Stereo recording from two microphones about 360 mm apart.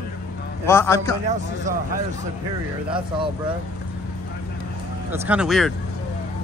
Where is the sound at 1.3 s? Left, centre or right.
Right.